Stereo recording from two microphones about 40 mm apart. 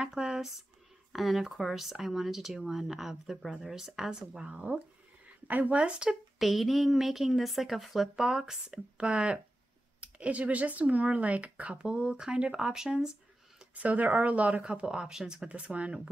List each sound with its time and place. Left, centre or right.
0.1 s speech: centre
1.1 s speech: centre
4.5 s speech: right
5.5 s speech: right
5.8 s speech: right
6.0 s a woman's voice: centre
8.2 s speech: centre; by 12.0 s right
12.0 s speech: right
13.7 s speech: right
14.9 s speech: centre
15.5 s speech: right